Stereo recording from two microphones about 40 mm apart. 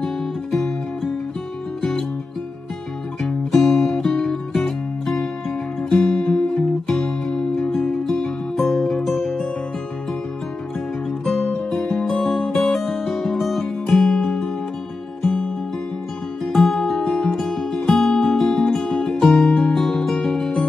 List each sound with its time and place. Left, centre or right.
0.0 s music: centre
3.2 s music: centre
11.2 s music: centre
16.5 s music: centre
19.6 s guitar: centre